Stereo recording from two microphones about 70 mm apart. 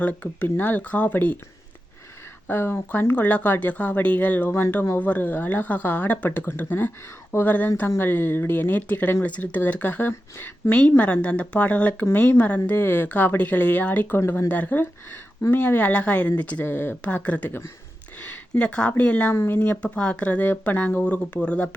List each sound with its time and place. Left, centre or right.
0.0 s speech: left
2.5 s speech: left
10.1 s speech: left
10.7 s speech: left
16.6 s speech: left
17.2 s speech: centre
19.3 s speech: left
19.8 s speech: centre